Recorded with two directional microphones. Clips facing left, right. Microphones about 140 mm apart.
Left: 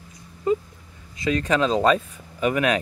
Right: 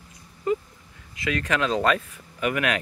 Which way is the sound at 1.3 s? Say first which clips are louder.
Left 4 dB; 30° left (ahead or behind).